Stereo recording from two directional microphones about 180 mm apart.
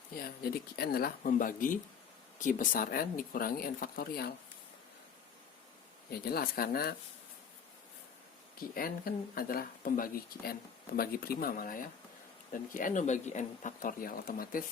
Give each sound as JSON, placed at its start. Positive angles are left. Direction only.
{"t": 0.2, "sound": "speech", "side_deg": 60}
{"t": 6.1, "sound": "speech", "side_deg": 60}
{"t": 8.7, "sound": "speech", "side_deg": 55}